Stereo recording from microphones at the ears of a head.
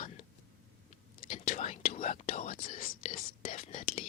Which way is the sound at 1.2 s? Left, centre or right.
Left.